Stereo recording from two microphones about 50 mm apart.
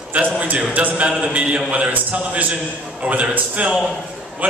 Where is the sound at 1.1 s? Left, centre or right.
Centre.